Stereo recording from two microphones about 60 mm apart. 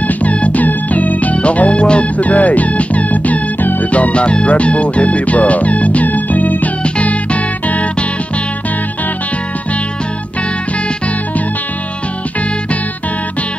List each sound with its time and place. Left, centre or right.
0.2 s music: left